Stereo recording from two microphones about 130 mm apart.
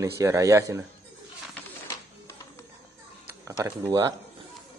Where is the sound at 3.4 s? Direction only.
25° right (ahead or behind).